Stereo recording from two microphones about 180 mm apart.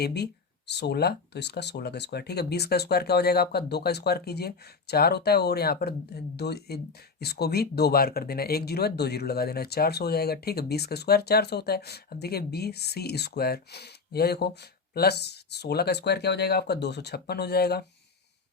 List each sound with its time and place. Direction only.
0.0 s speech: 65° left (ahead or behind)